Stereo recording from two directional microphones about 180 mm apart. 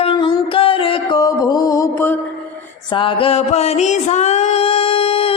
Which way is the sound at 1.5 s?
20° left (ahead or behind).